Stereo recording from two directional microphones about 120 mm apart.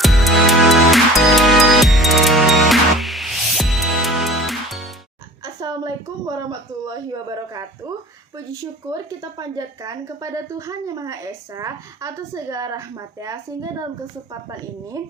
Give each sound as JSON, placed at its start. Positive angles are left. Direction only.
{"t": 0.0, "sound": "music", "side_deg": 0}
{"t": 5.5, "sound": "a sound", "side_deg": -35}
{"t": 8.9, "sound": "a woman's voice", "side_deg": -30}